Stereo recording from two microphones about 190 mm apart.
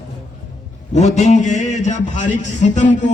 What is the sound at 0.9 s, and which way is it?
A man's voice, 40° left (ahead or behind).